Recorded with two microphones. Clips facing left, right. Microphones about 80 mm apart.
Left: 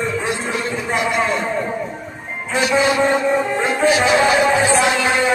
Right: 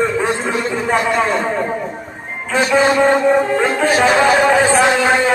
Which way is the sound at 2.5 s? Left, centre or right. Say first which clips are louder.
Right 3 dB; right.